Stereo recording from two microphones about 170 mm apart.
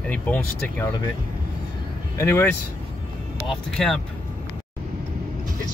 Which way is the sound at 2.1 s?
15° left (ahead or behind).